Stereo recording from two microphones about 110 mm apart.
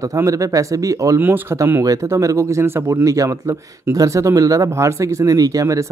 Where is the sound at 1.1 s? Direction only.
20° right (ahead or behind).